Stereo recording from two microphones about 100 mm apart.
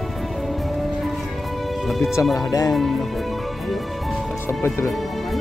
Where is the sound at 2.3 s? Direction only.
35° left (ahead or behind).